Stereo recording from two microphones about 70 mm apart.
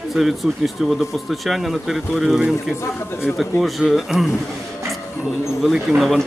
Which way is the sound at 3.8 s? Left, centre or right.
Centre.